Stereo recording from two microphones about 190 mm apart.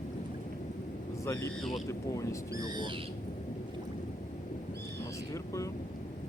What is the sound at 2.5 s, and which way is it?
Speech, 20° right (ahead or behind).